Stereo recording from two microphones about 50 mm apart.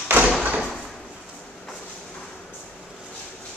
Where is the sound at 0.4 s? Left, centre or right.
Right.